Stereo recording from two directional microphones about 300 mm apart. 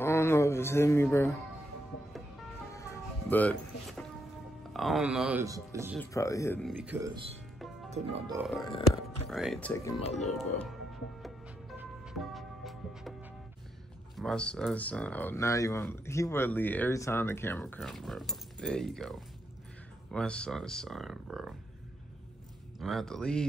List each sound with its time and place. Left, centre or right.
0.0 s a sound: centre
2.7 s music: centre
4.7 s speech: centre
5.9 s speech: centre
7.9 s speech: centre
8.4 s speech: centre
10.3 s music: centre
14.1 s speech: centre
22.8 s speech: centre